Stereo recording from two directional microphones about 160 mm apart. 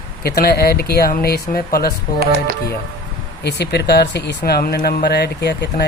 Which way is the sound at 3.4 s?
90° left.